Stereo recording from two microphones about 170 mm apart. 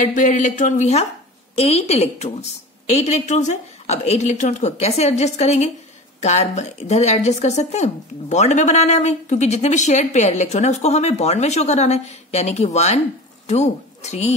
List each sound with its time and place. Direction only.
0.0 s a woman's voice: 50° left (ahead or behind)